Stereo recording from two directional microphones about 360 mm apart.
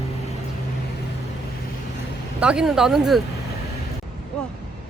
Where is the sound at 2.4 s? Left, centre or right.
Centre.